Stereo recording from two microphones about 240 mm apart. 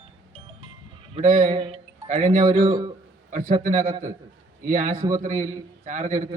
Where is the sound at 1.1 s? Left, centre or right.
Right.